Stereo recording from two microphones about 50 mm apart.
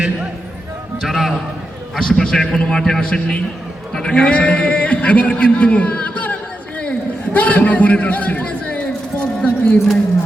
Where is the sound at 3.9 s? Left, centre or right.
Centre.